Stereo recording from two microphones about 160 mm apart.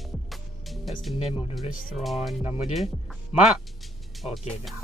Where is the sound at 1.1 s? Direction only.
40° left (ahead or behind).